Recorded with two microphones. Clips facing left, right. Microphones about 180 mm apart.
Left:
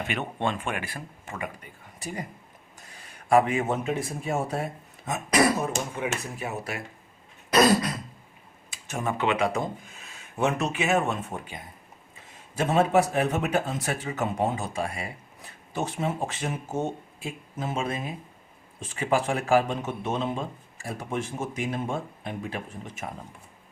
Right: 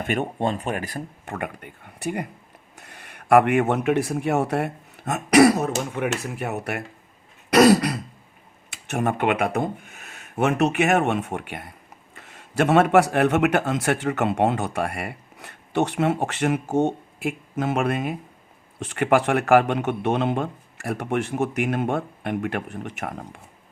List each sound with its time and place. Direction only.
0.0 s speech: 45° right (ahead or behind)
1.2 s speech: 60° right (ahead or behind)
7.5 s throat clearing: 70° right (ahead or behind)
8.7 s speech: 65° right (ahead or behind)